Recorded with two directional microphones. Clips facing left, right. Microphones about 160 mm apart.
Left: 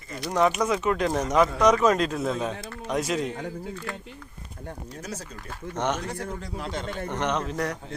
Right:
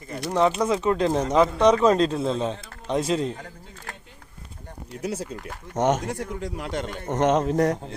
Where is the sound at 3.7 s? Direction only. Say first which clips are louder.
Left 7 dB; 45° right (ahead or behind).